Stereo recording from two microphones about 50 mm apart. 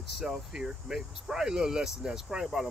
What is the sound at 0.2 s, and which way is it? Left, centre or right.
Speech, centre.